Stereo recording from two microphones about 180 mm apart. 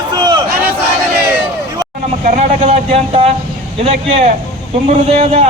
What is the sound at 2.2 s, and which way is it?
A man's voice, 35° right (ahead or behind).